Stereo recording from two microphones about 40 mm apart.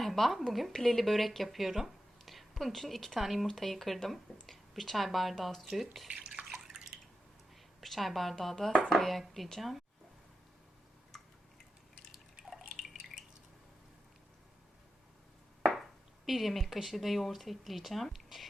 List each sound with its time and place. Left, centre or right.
0.0 s a woman's voice: centre
3.4 s speech: centre
6.1 s bathtub: right
6.5 s drip: centre
7.8 s speech: centre
12.4 s drip: centre
15.7 s speech: centre